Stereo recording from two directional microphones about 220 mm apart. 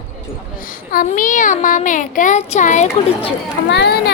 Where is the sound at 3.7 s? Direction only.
50° left (ahead or behind).